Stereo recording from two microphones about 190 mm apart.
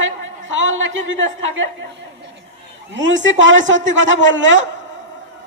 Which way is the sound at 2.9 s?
75° right (ahead or behind).